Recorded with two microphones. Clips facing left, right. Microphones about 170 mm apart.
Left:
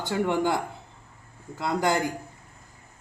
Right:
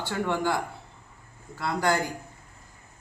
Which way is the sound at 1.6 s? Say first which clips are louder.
Left 1 dB; 20° left (ahead or behind).